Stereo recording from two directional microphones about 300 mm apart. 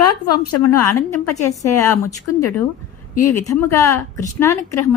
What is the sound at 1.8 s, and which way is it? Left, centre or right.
Speech, centre.